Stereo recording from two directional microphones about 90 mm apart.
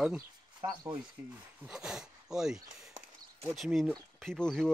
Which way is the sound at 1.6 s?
5° right (ahead or behind).